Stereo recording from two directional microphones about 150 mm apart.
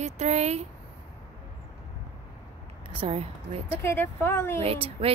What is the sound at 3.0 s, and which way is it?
Speech, 40° right (ahead or behind).